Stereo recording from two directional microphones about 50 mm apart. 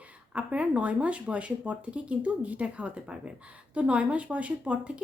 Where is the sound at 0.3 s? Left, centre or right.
Right.